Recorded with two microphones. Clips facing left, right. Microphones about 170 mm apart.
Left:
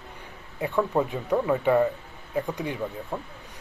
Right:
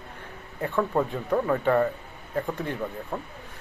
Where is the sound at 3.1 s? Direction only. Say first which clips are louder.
Even; centre (ahead or behind).